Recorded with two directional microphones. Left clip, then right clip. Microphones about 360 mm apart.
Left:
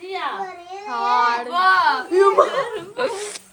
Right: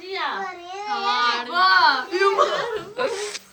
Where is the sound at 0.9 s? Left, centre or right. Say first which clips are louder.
Left 3 dB; centre.